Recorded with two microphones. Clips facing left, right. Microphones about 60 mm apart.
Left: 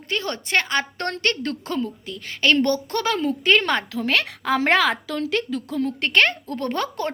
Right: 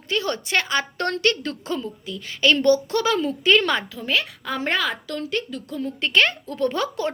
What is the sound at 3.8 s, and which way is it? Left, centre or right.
A woman's voice, left.